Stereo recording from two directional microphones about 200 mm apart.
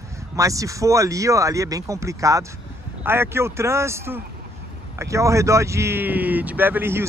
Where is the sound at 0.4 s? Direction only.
15° right (ahead or behind).